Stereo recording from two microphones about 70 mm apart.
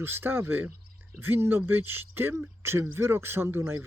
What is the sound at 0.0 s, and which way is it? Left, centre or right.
Speech, right.